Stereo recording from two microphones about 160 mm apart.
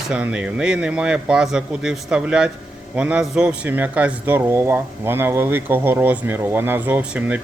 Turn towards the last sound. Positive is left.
turn(degrees=-5)  # may be behind; listen again after turning